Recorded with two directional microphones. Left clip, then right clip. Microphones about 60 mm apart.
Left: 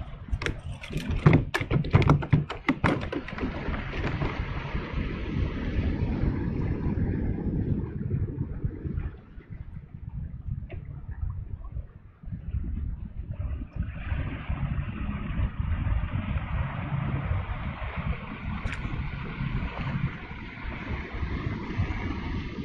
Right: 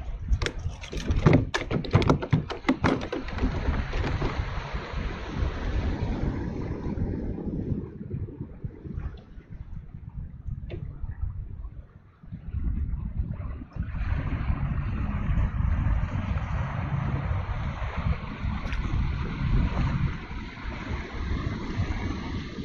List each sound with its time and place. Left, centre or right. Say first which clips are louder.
0.3 s a sound: right 1 dB; centre
4.1 s thunder: right 1 dB; centre
7.2 s vehicle: left 1 dB; centre
13.3 s vehicle: right 1 dB; right
17.4 s wind: right 1 dB; right
17.9 s a sound: right 1 dB; right
18.6 s vehicle: left 1 dB; centre
18.9 s a sound: right 2 dB; right
20.8 s vehicle: right 1 dB; centre